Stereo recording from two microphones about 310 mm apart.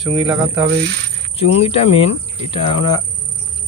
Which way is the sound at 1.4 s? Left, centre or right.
Centre.